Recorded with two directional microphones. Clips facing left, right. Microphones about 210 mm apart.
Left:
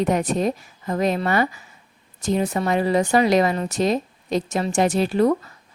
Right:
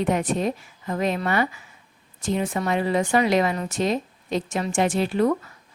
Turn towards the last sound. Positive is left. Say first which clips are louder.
# left 3 dB
turn(degrees=35)  # may be behind; listen again after turning